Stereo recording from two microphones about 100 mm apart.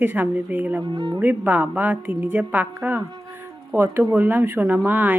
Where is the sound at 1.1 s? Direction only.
15° right (ahead or behind).